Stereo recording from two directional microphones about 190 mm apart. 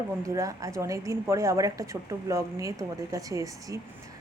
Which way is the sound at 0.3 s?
15° right (ahead or behind).